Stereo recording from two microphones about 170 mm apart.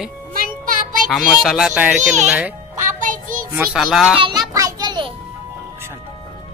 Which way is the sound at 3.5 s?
5° right (ahead or behind).